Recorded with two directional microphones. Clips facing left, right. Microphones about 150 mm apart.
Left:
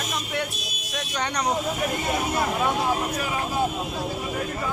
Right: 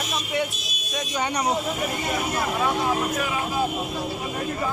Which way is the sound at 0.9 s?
5° right (ahead or behind).